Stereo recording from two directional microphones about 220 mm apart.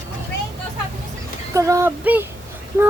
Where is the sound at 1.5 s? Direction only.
15° right (ahead or behind).